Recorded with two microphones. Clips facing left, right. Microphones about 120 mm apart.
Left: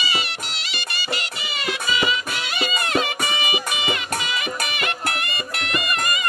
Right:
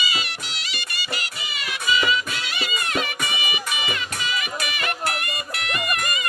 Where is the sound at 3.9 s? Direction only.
55° left (ahead or behind).